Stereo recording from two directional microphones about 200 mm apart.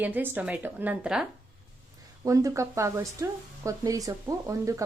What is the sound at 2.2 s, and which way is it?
A woman's voice, 15° right (ahead or behind).